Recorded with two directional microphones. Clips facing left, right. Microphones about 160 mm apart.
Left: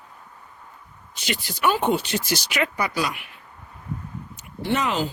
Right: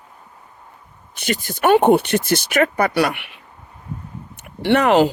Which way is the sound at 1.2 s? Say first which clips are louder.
Right 6 dB; 50° right (ahead or behind).